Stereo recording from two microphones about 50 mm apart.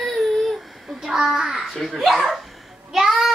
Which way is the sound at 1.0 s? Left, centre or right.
Centre.